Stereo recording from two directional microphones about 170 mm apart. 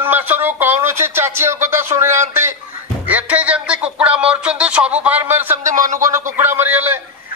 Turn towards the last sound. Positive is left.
turn(degrees=-10)  # may be behind; listen again after turning